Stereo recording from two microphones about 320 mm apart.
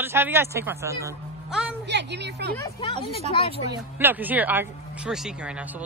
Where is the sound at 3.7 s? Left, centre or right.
Centre.